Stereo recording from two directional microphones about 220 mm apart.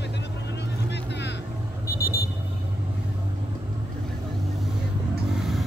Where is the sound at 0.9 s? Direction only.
50° left (ahead or behind).